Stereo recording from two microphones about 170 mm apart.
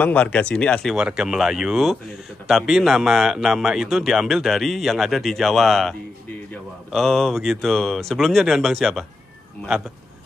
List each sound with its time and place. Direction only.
0.0 s speech: 10° left (ahead or behind)
0.9 s speech: 5° right (ahead or behind)